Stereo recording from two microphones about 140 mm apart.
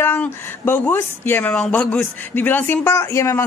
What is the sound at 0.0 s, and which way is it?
A woman's voice, 15° left (ahead or behind).